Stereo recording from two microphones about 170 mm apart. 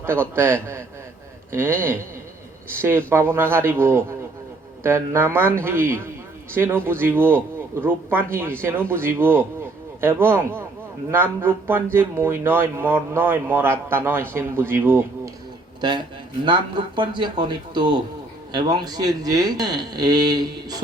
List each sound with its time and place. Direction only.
0.0 s speech: 15° right (ahead or behind)
3.1 s speech: 15° right (ahead or behind)
15.8 s speech: 25° right (ahead or behind)